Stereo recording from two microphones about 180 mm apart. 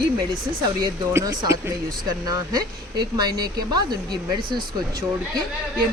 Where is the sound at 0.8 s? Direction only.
20° right (ahead or behind).